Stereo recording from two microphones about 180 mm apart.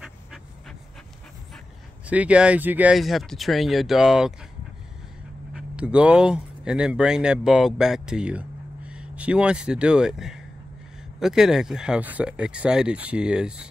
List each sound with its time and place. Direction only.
0.0 s a sound: centre (ahead or behind)
2.0 s speech: 5° right (ahead or behind)
5.5 s speech: 5° right (ahead or behind)